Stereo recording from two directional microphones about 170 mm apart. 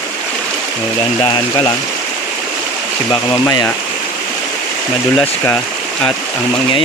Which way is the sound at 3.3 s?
20° left (ahead or behind).